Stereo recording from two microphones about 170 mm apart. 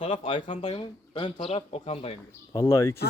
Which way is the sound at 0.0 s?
30° left (ahead or behind).